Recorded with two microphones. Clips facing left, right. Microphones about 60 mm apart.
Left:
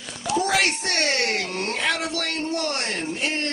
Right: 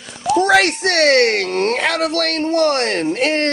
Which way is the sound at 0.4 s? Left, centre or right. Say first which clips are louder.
Right 9 dB; right.